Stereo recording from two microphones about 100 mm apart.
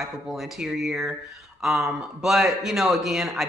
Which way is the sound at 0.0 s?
Centre (ahead or behind).